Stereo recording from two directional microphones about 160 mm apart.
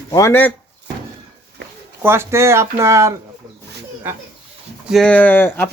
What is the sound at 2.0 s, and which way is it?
Speech, 15° right (ahead or behind).